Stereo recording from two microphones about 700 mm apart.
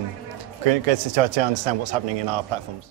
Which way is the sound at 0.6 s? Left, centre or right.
Right.